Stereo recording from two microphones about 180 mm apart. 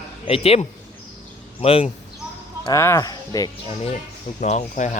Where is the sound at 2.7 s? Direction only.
15° left (ahead or behind).